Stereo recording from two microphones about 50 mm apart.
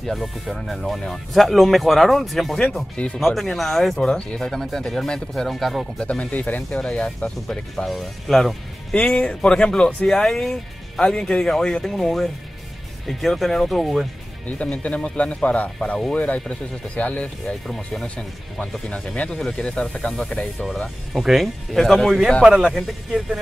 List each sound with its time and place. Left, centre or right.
0.0 s speech: centre
4.1 s speech: centre
5.9 s speech: left
6.8 s speech: centre
8.9 s speech: left
10.0 s speech: centre
15.1 s speech: left
17.6 s speech: centre
18.0 s speech: left
21.2 s speech: centre
22.4 s speech: centre
22.8 s speech: centre